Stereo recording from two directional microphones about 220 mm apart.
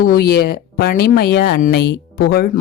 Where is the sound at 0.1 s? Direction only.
45° left (ahead or behind).